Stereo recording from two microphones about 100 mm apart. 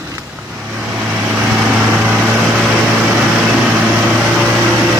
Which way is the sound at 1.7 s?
10° right (ahead or behind).